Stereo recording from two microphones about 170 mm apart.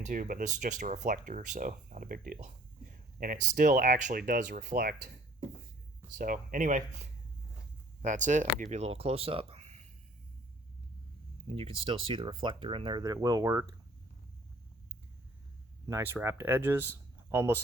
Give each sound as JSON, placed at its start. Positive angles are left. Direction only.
{"t": 0.0, "sound": "speech", "side_deg": -50}
{"t": 4.6, "sound": "speech", "side_deg": -65}
{"t": 6.1, "sound": "speech", "side_deg": -55}
{"t": 11.4, "sound": "speech", "side_deg": -35}
{"t": 15.9, "sound": "speech", "side_deg": -15}